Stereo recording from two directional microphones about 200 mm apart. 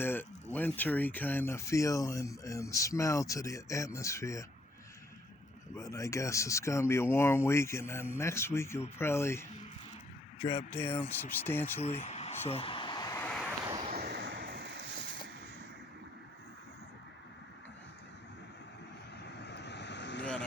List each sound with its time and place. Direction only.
0.0 s speech: 10° left (ahead or behind)
5.7 s speech: 15° left (ahead or behind)
10.7 s speech: 10° left (ahead or behind)
11.8 s speech: 30° left (ahead or behind)
12.5 s a sound: 30° left (ahead or behind); by 13.5 s 5° left (ahead or behind)
13.5 s vehicle: 20° right (ahead or behind)
13.9 s vehicle: 50° right (ahead or behind)
19.2 s vehicle: 60° left (ahead or behind)